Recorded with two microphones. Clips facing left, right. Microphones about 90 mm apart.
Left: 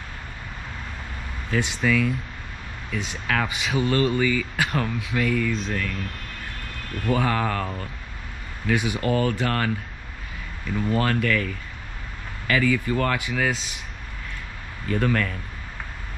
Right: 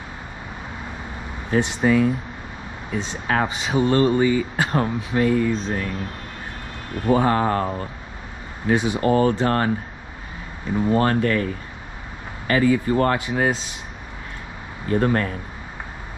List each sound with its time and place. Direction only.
1.5 s speech: 25° right (ahead or behind)
7.1 s speech: 25° right (ahead or behind)
10.7 s speech: 25° right (ahead or behind)
14.9 s speech: 25° right (ahead or behind)